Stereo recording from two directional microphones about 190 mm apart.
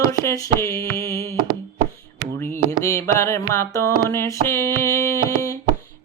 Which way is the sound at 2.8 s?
15° left (ahead or behind).